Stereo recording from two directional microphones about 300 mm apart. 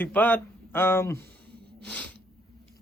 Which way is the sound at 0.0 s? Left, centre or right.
Centre.